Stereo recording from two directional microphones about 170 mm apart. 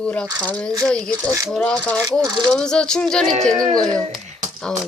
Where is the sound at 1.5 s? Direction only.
5° left (ahead or behind).